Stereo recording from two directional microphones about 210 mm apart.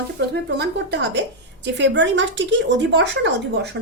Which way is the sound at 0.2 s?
55° right (ahead or behind).